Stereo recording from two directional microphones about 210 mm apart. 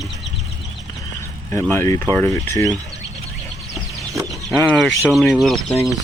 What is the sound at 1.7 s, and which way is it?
Speech, 10° left (ahead or behind).